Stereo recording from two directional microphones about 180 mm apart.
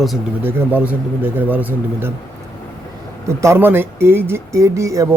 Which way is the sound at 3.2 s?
15° right (ahead or behind).